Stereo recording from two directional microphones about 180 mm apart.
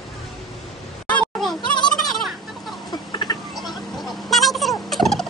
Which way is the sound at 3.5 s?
Centre (ahead or behind).